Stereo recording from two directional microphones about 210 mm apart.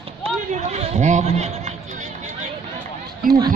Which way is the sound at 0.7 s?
30° right (ahead or behind).